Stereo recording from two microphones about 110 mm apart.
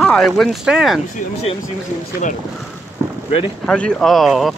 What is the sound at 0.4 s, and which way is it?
Speech, 5° right (ahead or behind).